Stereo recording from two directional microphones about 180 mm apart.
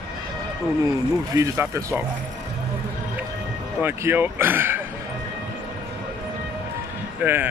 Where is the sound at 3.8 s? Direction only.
10° right (ahead or behind).